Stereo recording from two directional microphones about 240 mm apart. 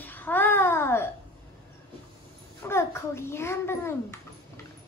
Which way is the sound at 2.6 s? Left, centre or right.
Centre.